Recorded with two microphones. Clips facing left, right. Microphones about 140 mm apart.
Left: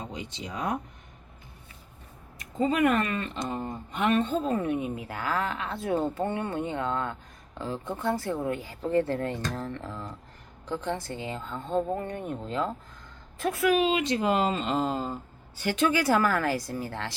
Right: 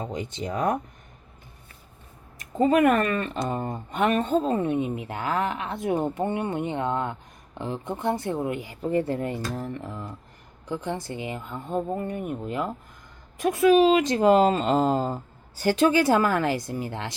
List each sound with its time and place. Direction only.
0.1 s speech: 50° right (ahead or behind)
2.4 s speech: 50° right (ahead or behind)
4.5 s speech: 25° right (ahead or behind)
13.7 s speech: 40° right (ahead or behind); by 17.2 s 20° right (ahead or behind)